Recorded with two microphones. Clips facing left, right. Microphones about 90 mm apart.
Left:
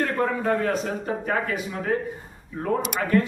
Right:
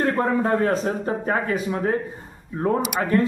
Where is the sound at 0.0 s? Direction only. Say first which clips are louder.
Right 3 dB; 30° right (ahead or behind).